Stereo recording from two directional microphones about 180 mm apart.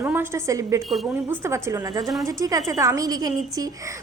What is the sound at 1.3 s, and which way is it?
A woman's voice, 15° right (ahead or behind).